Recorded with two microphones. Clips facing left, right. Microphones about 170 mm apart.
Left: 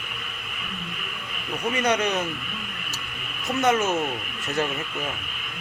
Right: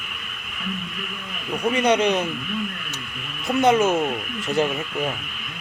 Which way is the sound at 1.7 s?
30° right (ahead or behind).